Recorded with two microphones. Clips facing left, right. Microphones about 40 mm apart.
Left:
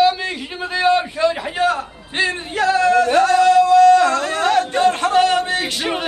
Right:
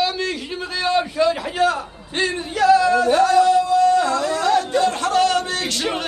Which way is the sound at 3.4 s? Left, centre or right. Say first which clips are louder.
Left 4 dB; left.